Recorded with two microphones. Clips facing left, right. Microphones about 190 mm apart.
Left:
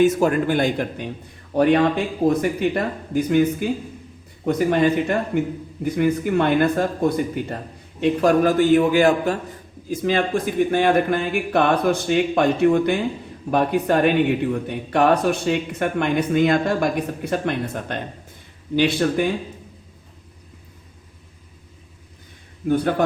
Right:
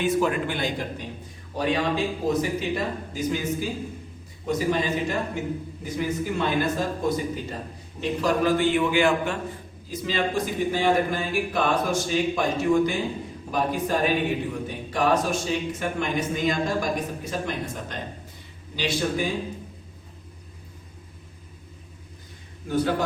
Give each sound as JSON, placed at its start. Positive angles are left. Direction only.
{"t": 0.0, "sound": "a man's voice", "side_deg": 45}
{"t": 8.2, "sound": "a man's voice", "side_deg": 50}
{"t": 9.9, "sound": "speech", "side_deg": 50}
{"t": 22.7, "sound": "speech", "side_deg": 60}